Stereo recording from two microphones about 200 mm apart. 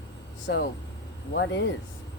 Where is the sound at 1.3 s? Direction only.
65° left (ahead or behind).